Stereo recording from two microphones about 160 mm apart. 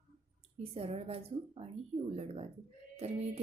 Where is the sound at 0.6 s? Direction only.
40° right (ahead or behind).